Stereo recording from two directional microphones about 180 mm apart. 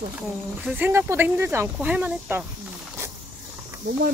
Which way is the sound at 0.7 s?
10° right (ahead or behind).